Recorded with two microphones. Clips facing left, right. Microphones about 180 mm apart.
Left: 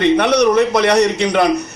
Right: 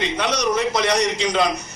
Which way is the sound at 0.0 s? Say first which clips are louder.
Left 10 dB; 60° left (ahead or behind).